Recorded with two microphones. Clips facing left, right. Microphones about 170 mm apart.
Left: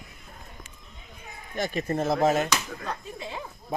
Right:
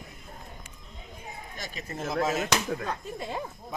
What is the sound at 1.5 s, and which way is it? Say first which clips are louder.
Speech: left 11 dB; 50° left (ahead or behind).